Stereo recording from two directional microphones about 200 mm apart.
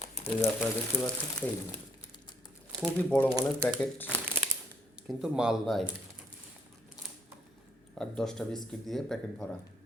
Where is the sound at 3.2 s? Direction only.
20° right (ahead or behind).